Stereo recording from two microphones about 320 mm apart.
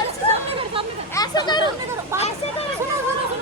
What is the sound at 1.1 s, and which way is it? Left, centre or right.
Speech, centre.